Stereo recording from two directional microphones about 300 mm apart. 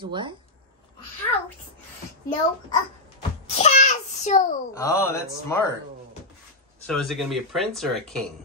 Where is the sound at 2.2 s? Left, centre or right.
Centre.